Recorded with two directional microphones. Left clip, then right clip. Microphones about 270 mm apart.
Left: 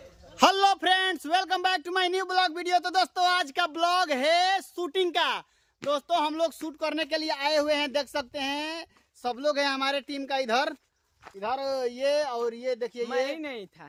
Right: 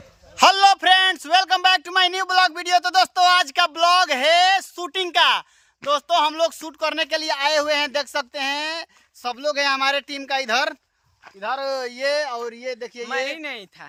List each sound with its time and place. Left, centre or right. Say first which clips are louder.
0.3 s a man's voice: right 7 dB; centre
12.2 s a man's voice: right 2 dB; right
13.2 s speech: right 4 dB; centre